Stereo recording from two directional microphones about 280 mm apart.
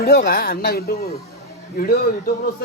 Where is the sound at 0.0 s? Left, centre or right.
Left.